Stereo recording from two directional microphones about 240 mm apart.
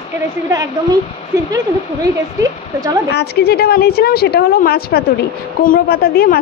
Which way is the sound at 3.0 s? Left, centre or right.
Left.